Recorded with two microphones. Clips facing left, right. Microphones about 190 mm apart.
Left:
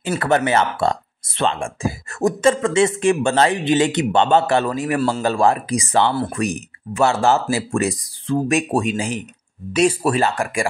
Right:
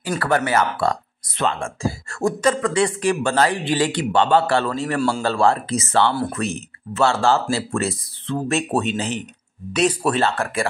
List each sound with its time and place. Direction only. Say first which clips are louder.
0.2 s speech: left 2 dB; 25° left (ahead or behind)